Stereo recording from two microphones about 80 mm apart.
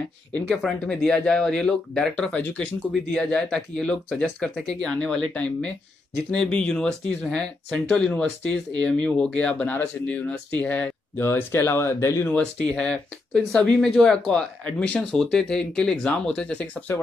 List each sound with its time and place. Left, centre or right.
0.5 s speech: centre
11.1 s speech: left
12.4 s speech: centre
16.9 s speech: left